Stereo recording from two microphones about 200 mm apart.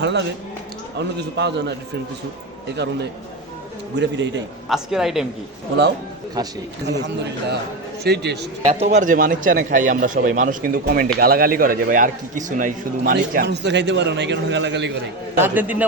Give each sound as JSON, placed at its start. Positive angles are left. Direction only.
{"t": 0.0, "sound": "a man's voice", "side_deg": -60}
{"t": 2.7, "sound": "a man's voice", "side_deg": -60}
{"t": 4.7, "sound": "a woman's voice", "side_deg": 0}
{"t": 6.4, "sound": "speech", "side_deg": -20}
{"t": 6.8, "sound": "a man's voice", "side_deg": -60}
{"t": 8.6, "sound": "a man's voice", "side_deg": -35}
{"t": 15.4, "sound": "a man's voice", "side_deg": -10}